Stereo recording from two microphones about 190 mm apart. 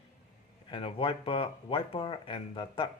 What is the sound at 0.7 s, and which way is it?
Speech, 30° left (ahead or behind).